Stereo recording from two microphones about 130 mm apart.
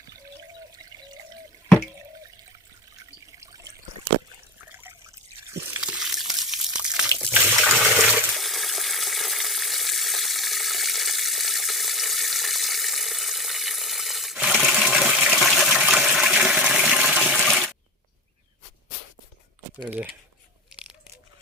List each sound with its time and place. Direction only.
4.7 s trickle: 15° right (ahead or behind)
5.8 s water: 5° right (ahead or behind)
8.2 s a sound: centre (ahead or behind)
15.3 s water: centre (ahead or behind)